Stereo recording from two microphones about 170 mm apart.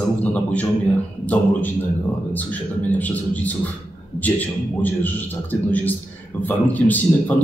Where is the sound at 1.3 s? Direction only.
10° left (ahead or behind).